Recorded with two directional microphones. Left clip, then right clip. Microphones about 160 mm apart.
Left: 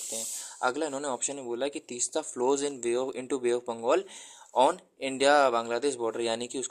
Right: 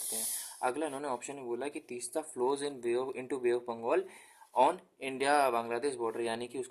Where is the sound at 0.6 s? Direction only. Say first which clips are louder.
Left 5 dB; 30° left (ahead or behind).